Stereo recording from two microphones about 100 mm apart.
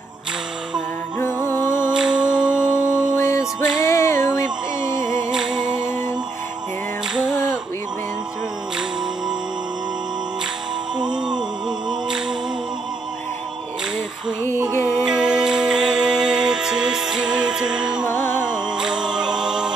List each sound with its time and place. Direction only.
1.1 s music: 25° left (ahead or behind)
1.9 s music: 10° right (ahead or behind)
2.5 s music: 25° left (ahead or behind)
5.3 s music: 5° right (ahead or behind)
5.9 s music: 25° left (ahead or behind)
7.2 s a sound: 5° right (ahead or behind)
11.0 s music: 5° right (ahead or behind)
11.9 s a capella: 5° right (ahead or behind)
15.0 s music: 5° right (ahead or behind)
18.0 s music: 25° left (ahead or behind)
18.4 s music: 10° right (ahead or behind)